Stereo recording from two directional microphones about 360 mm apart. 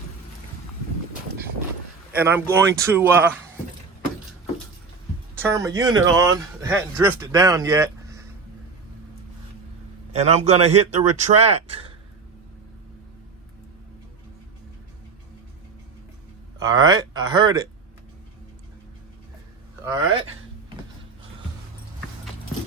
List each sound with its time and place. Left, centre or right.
2.1 s a man's voice: centre
5.4 s a man's voice: centre
10.1 s a man's voice: centre
16.6 s a man's voice: centre